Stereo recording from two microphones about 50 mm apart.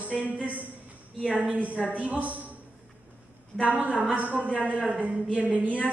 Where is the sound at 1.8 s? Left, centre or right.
Right.